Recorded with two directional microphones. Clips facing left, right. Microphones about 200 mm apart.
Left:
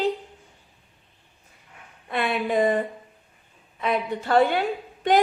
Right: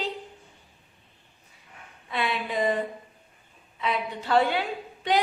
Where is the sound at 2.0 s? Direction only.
50° left (ahead or behind).